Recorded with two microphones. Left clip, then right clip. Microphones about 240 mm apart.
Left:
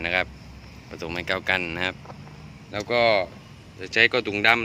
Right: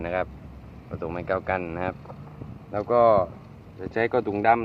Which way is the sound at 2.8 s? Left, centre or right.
Centre.